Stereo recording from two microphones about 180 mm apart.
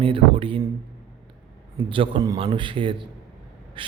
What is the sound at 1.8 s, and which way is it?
A man's voice, 30° right (ahead or behind).